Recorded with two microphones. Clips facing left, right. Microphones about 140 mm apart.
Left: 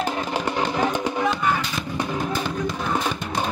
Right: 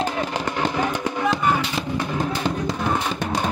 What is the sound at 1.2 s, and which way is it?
Music, 5° right (ahead or behind).